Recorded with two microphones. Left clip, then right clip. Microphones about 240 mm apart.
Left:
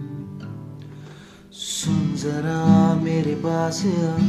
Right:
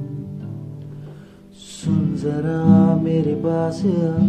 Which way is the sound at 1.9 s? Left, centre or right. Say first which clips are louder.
Right 5 dB; left.